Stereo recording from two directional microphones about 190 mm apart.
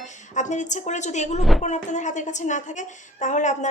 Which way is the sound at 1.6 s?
40° left (ahead or behind).